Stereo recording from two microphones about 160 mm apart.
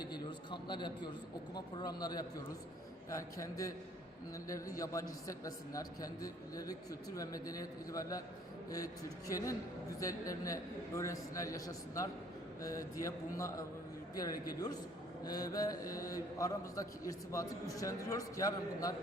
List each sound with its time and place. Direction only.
0.0 s a man's voice: 30° left (ahead or behind)
4.8 s a man's voice: 20° left (ahead or behind)